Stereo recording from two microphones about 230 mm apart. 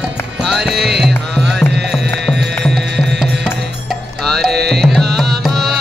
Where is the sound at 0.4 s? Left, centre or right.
Centre.